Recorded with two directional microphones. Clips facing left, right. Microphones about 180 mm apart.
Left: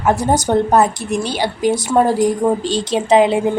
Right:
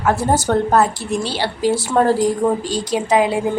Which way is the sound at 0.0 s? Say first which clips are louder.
Left 2 dB; 20° left (ahead or behind).